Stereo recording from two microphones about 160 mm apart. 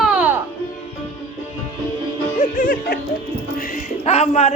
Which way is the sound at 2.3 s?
60° left (ahead or behind).